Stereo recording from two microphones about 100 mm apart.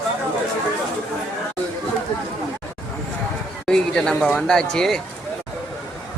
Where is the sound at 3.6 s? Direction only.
5° left (ahead or behind).